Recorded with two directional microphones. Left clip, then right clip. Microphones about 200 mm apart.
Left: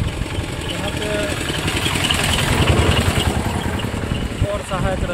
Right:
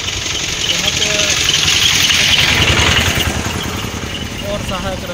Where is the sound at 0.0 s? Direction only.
50° left (ahead or behind).